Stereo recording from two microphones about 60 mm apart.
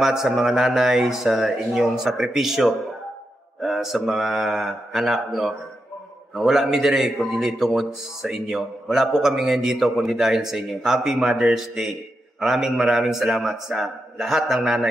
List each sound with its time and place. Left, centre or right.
0.0 s a man's voice: centre